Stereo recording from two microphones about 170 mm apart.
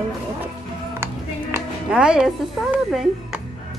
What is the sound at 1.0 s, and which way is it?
Speech, 10° right (ahead or behind).